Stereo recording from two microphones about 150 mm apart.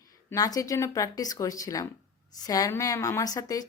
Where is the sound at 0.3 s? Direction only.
20° left (ahead or behind).